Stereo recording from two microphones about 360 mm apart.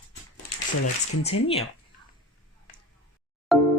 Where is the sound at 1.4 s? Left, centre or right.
Centre.